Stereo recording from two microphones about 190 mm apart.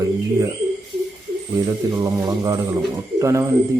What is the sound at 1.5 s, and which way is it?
A man's voice, 20° right (ahead or behind).